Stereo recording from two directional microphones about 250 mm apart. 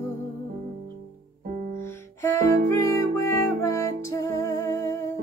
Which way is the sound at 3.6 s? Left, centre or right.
Centre.